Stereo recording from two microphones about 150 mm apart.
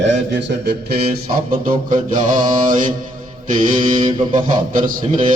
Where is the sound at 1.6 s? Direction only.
65° right (ahead or behind).